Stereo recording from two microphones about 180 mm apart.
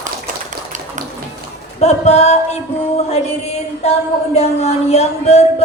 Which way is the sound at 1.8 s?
35° left (ahead or behind).